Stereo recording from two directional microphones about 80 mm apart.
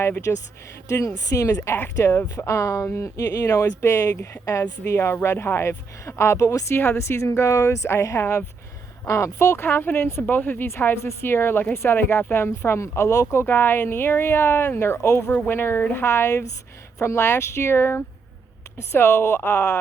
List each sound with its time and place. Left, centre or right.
0.9 s speech: left
1.5 s speech: left
15.3 s speech: centre
15.5 s speech: left